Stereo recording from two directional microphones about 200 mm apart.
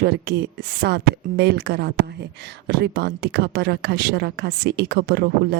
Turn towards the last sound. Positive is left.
turn(degrees=-50)  # may be behind; listen again after turning